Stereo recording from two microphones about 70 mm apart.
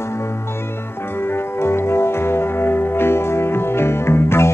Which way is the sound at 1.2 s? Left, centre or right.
Left.